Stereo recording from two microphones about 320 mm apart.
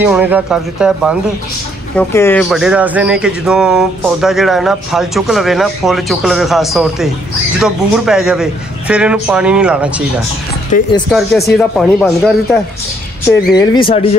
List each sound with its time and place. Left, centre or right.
0.0 s speech: centre
10.7 s speech: left
11.1 s speech: centre
13.6 s speech: centre